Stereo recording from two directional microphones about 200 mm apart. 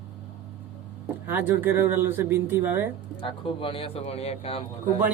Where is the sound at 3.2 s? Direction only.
25° left (ahead or behind).